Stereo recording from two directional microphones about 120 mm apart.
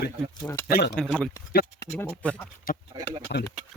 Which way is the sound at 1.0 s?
10° left (ahead or behind).